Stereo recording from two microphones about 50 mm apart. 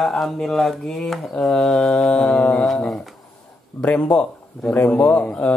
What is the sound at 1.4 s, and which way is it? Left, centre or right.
Mantra, centre.